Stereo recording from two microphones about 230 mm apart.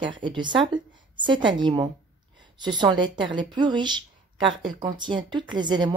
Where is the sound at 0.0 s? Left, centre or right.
Right.